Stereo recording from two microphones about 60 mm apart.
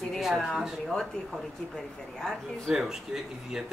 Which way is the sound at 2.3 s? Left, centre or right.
Centre.